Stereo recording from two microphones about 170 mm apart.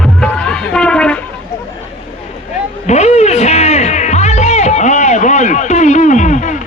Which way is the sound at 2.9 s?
40° left (ahead or behind).